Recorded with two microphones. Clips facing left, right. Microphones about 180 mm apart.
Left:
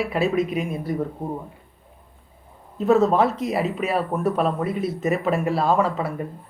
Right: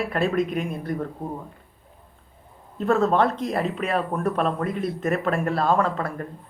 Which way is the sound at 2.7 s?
Centre (ahead or behind).